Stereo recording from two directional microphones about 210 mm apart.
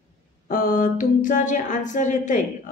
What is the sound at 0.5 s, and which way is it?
A woman's voice, 40° left (ahead or behind).